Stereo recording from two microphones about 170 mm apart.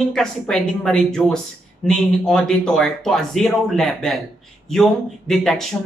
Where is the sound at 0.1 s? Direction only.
5° left (ahead or behind).